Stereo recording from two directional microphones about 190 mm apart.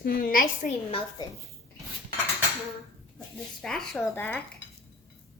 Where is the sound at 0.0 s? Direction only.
50° left (ahead or behind).